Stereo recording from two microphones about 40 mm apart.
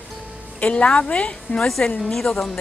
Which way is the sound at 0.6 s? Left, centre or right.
Left.